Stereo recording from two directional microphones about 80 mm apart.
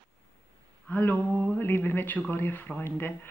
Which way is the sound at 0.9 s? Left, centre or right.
Left.